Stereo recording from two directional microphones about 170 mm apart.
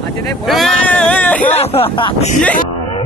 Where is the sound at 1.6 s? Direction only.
35° left (ahead or behind).